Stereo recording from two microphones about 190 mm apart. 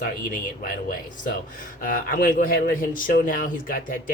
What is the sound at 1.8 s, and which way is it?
Speech, 45° left (ahead or behind).